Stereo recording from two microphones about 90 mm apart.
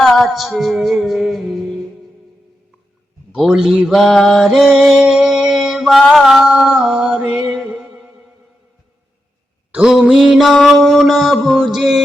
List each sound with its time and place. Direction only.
0.0 s music: centre (ahead or behind)
3.3 s mantra: 5° right (ahead or behind)
9.7 s a sound: 5° right (ahead or behind)
10.0 s music: centre (ahead or behind)